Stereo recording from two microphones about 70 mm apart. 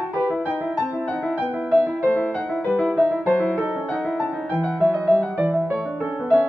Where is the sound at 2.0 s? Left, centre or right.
Centre.